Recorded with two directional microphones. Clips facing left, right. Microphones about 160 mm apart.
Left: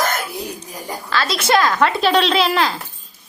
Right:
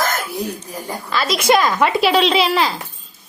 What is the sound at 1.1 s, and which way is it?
Speech, 5° right (ahead or behind).